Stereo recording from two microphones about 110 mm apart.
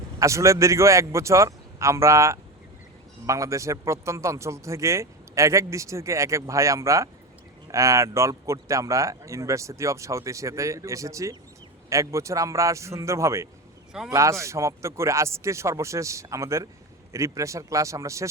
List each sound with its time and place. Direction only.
0.2 s a man's voice: 30° right (ahead or behind)